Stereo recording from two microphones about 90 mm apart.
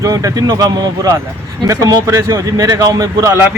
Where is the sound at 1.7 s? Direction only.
35° right (ahead or behind).